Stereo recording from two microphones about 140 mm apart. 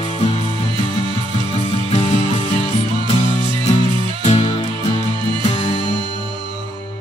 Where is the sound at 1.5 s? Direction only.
45° left (ahead or behind).